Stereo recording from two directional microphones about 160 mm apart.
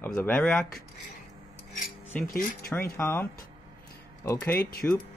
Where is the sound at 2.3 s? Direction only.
65° left (ahead or behind).